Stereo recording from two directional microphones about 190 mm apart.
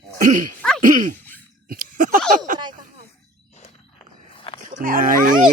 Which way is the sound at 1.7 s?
50° right (ahead or behind).